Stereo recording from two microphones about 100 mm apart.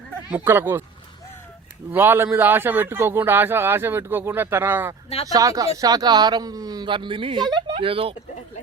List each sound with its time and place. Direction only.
0.3 s a man's voice: 20° right (ahead or behind)
1.9 s a man's voice: 20° right (ahead or behind)
5.3 s speech: 35° right (ahead or behind)
7.7 s speech: 65° right (ahead or behind)